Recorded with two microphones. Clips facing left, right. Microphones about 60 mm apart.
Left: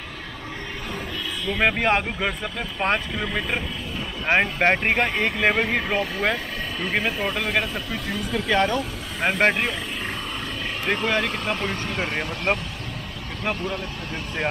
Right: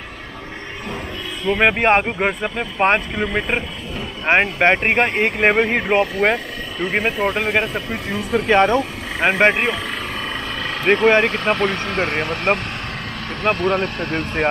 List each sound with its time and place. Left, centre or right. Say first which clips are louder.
1.4 s speech: right 6 dB; right
9.4 s speech: right 4 dB; right
9.8 s speech: right 4 dB; right
13.4 s speech: right 9 dB; right